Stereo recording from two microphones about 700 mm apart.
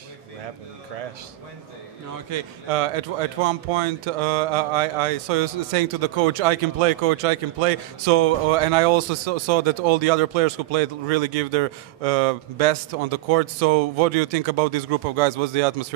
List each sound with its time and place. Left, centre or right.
2.3 s a man's voice: right